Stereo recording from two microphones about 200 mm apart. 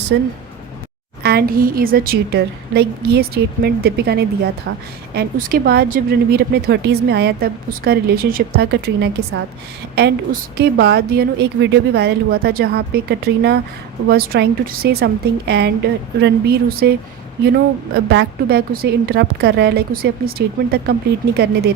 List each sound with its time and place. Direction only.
0.1 s a woman's voice: 65° right (ahead or behind)
1.2 s a woman's voice: 50° right (ahead or behind)
18.1 s a woman's voice: 55° right (ahead or behind)